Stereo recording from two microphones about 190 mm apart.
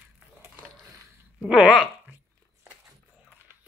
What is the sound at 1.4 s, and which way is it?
Speech, centre (ahead or behind).